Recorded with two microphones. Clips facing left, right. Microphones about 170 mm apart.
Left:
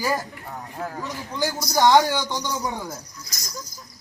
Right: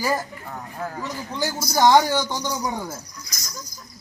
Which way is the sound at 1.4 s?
Centre (ahead or behind).